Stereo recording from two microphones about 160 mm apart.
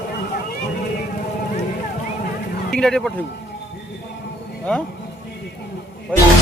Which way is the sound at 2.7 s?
5° left (ahead or behind).